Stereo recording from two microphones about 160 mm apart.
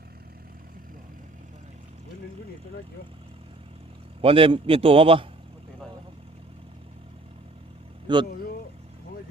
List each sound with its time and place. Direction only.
4.2 s a man's voice: 35° right (ahead or behind)
8.0 s speech: 30° right (ahead or behind)